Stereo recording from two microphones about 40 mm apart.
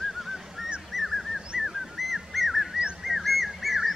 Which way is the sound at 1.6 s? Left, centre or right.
Centre.